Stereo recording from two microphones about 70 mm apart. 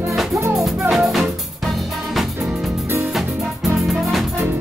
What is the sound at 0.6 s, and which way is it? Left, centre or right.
Music, centre.